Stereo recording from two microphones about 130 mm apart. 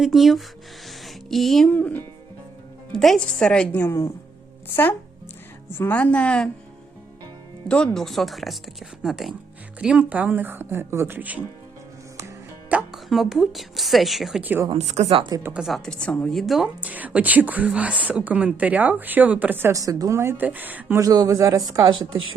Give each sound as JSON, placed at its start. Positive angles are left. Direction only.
{"t": 0.0, "sound": "speech", "side_deg": 0}
{"t": 2.9, "sound": "a woman's voice", "side_deg": 0}
{"t": 5.7, "sound": "a woman's voice", "side_deg": 15}
{"t": 7.9, "sound": "a woman's voice", "side_deg": 0}
{"t": 12.6, "sound": "speech", "side_deg": -5}
{"t": 14.4, "sound": "a woman's voice", "side_deg": -15}
{"t": 14.7, "sound": "speech", "side_deg": -60}
{"t": 15.1, "sound": "speech", "side_deg": -40}
{"t": 15.6, "sound": "a woman's voice", "side_deg": 5}
{"t": 21.0, "sound": "speech", "side_deg": -30}